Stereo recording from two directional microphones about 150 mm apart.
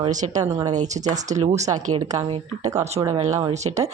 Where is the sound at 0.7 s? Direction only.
55° right (ahead or behind).